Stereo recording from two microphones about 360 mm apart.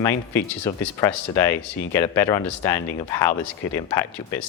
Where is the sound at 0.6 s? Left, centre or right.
Centre.